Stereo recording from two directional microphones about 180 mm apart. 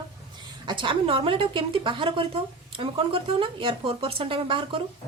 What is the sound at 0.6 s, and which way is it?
A woman's voice, 25° right (ahead or behind).